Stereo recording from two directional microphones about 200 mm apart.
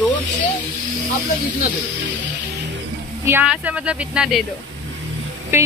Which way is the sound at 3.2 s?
5° right (ahead or behind).